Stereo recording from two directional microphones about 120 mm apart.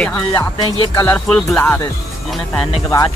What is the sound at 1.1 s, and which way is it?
Speech, 10° left (ahead or behind).